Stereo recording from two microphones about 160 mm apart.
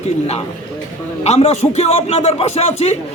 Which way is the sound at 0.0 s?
40° left (ahead or behind).